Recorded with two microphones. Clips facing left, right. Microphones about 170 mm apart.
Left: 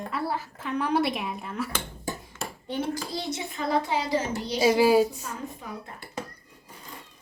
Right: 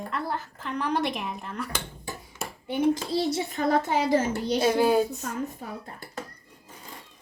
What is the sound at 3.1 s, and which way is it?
Speech, 30° right (ahead or behind).